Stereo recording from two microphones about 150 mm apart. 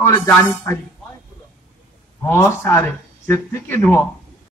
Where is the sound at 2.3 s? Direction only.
15° left (ahead or behind).